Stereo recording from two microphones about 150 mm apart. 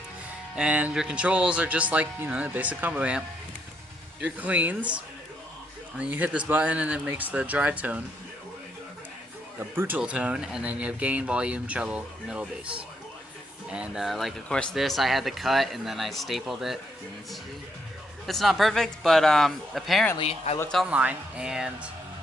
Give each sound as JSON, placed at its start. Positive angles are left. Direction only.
{"t": 0.5, "sound": "speech", "side_deg": -5}
{"t": 6.0, "sound": "speech", "side_deg": -10}
{"t": 9.6, "sound": "speech", "side_deg": -15}
{"t": 18.3, "sound": "speech", "side_deg": 0}
{"t": 20.1, "sound": "speech", "side_deg": 40}
{"t": 20.6, "sound": "speech", "side_deg": 5}
{"t": 20.8, "sound": "speech", "side_deg": -10}